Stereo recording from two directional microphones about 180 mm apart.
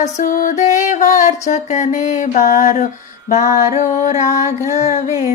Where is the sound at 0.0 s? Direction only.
50° left (ahead or behind).